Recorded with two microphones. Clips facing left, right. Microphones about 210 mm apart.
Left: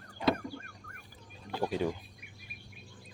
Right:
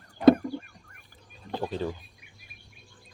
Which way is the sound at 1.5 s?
10° left (ahead or behind).